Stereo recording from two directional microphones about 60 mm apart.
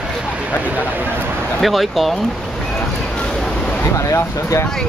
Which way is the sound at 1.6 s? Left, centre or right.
Centre.